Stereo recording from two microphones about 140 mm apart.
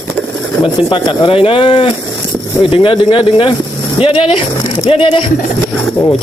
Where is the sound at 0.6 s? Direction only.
35° left (ahead or behind).